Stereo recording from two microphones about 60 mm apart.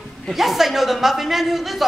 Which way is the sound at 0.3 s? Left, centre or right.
Centre.